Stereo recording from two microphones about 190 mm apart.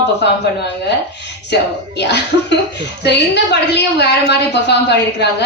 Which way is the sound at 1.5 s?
60° left (ahead or behind).